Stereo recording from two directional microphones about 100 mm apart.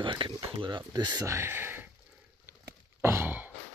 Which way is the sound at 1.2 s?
25° right (ahead or behind).